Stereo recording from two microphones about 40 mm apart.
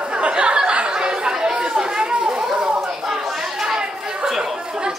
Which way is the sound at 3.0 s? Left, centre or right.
Centre.